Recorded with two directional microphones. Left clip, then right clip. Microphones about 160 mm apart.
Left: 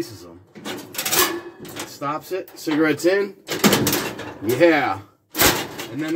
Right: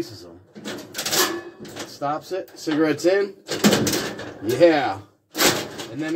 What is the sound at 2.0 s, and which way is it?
Speech, 5° left (ahead or behind).